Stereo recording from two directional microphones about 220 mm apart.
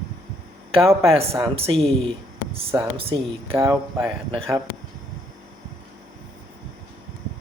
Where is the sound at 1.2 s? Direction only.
20° right (ahead or behind).